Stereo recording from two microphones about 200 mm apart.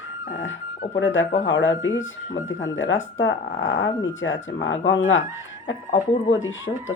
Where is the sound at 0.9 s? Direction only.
70° left (ahead or behind).